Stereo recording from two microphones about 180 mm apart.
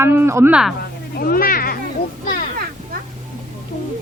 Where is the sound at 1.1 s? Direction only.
55° left (ahead or behind).